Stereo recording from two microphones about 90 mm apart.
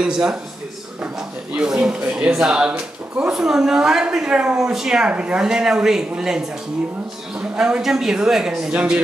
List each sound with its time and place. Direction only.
0.0 s speech: 10° right (ahead or behind)
1.5 s speech: 10° right (ahead or behind)